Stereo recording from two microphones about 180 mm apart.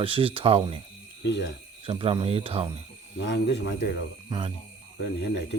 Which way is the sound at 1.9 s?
30° right (ahead or behind).